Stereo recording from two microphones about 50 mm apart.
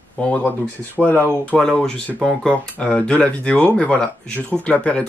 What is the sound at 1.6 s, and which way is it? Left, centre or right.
Speech, centre.